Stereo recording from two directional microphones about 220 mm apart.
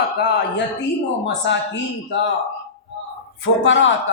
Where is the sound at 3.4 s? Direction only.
60° left (ahead or behind).